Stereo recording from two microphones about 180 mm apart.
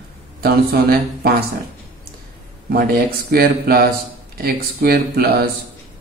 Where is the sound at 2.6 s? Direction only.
55° right (ahead or behind).